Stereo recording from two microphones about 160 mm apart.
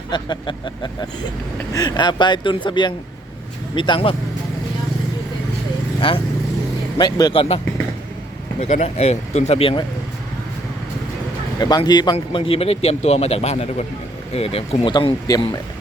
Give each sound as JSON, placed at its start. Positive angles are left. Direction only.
{"t": 0.1, "sound": "a man's voice", "side_deg": 30}
{"t": 6.0, "sound": "a man's voice", "side_deg": 35}
{"t": 8.6, "sound": "a man's voice", "side_deg": 45}
{"t": 11.6, "sound": "a man's voice", "side_deg": 25}